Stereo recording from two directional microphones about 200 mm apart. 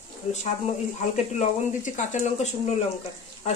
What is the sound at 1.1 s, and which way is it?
Speech, 35° left (ahead or behind).